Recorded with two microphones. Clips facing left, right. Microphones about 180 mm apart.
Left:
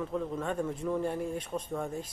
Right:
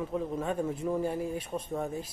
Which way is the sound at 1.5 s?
25° right (ahead or behind).